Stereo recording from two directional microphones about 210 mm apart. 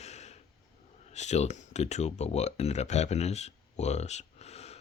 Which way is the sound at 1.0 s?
35° left (ahead or behind).